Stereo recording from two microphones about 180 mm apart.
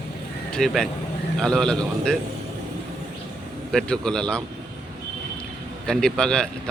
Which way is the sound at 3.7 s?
5° left (ahead or behind).